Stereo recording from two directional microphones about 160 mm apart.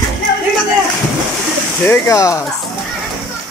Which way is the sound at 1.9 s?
20° left (ahead or behind).